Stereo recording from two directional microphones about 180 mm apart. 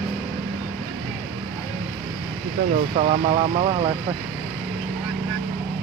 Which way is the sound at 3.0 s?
35° right (ahead or behind).